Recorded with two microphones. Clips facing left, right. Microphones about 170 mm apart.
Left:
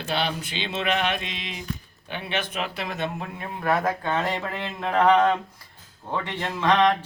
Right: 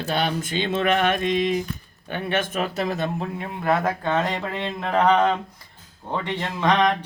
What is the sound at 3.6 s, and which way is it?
Speech, 20° right (ahead or behind).